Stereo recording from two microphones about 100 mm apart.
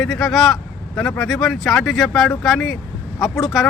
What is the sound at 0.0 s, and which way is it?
Speech, 5° left (ahead or behind).